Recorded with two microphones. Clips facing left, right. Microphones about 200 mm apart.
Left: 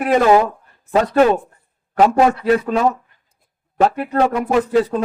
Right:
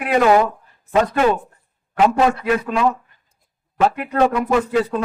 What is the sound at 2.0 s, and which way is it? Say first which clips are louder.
Speech: left 2 dB; 40° left (ahead or behind).